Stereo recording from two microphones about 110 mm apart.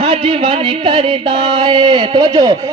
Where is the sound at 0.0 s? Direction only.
55° right (ahead or behind).